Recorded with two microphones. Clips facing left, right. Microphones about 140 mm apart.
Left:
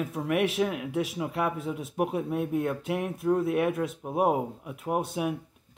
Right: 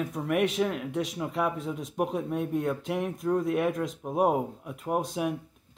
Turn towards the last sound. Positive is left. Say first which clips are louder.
# even
turn(degrees=5)  # may be behind; listen again after turning